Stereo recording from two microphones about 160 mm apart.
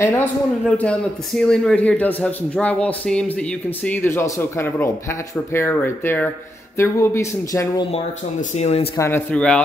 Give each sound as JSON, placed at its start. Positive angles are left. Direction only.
{"t": 0.0, "sound": "speech", "side_deg": 15}
{"t": 7.9, "sound": "speech", "side_deg": 40}
{"t": 8.9, "sound": "speech", "side_deg": 15}
{"t": 9.3, "sound": "speech", "side_deg": 5}